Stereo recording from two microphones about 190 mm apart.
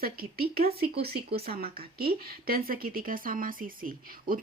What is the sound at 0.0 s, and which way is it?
Speech, 50° right (ahead or behind).